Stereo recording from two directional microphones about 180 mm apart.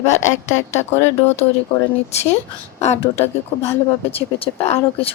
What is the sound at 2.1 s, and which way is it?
A woman's voice, 35° left (ahead or behind).